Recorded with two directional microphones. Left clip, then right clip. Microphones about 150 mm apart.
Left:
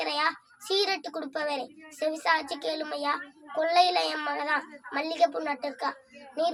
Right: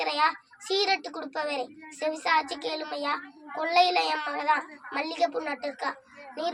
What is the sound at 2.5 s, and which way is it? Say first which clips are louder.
A child's voice: left 1 dB; 45° left (ahead or behind).